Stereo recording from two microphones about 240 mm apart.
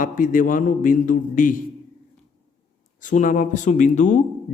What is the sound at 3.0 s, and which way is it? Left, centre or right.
A man's voice, left.